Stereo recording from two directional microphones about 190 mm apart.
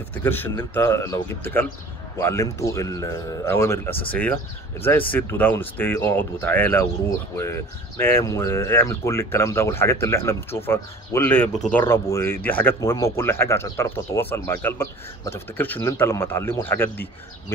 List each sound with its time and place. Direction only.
0.1 s speech: 10° left (ahead or behind)